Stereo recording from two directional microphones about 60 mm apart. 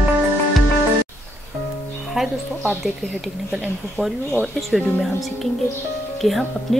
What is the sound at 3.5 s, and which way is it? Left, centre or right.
Speech, centre.